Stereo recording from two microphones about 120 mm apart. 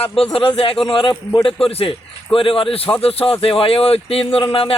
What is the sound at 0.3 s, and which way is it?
Speech, 50° left (ahead or behind).